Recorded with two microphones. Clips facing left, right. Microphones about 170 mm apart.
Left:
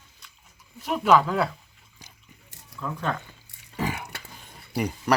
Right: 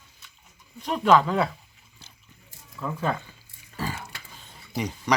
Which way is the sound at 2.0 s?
15° left (ahead or behind).